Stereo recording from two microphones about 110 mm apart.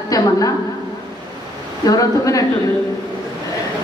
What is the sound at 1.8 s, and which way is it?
Speech, 30° left (ahead or behind).